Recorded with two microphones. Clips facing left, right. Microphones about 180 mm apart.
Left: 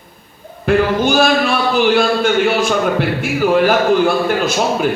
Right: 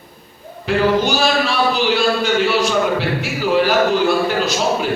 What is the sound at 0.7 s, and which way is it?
A man's voice, 55° left (ahead or behind).